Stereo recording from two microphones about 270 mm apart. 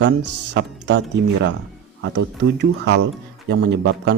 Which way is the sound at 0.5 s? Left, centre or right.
Right.